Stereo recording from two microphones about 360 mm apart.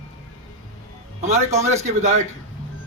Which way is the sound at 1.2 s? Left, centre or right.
Centre.